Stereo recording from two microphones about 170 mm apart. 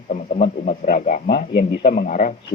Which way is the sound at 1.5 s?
85° left.